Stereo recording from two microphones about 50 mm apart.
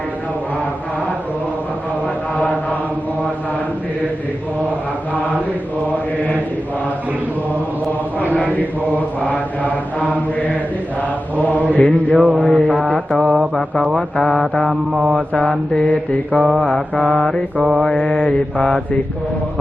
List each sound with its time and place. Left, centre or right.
5.9 s mantra: left
9.0 s mantra: left
11.3 s mantra: left
12.2 s mantra: right
12.5 s mantra: centre
15.4 s mantra: centre
15.9 s mantra: left
17.0 s mantra: centre